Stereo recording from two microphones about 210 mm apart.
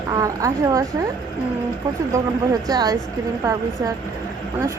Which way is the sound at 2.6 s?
20° right (ahead or behind).